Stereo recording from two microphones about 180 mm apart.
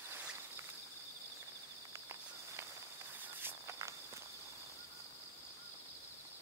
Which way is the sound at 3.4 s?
15° right (ahead or behind).